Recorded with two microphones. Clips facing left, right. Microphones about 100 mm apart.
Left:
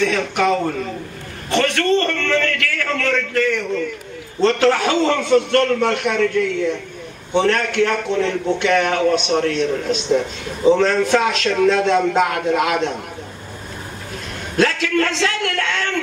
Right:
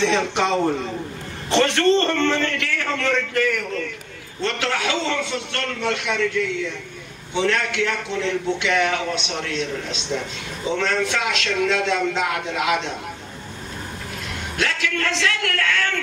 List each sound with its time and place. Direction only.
0.0 s a man's voice: 25° right (ahead or behind)
4.4 s a man's voice: 35° left (ahead or behind)
14.6 s a man's voice: 35° left (ahead or behind)